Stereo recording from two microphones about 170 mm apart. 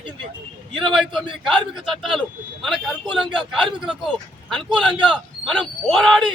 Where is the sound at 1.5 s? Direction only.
Centre (ahead or behind).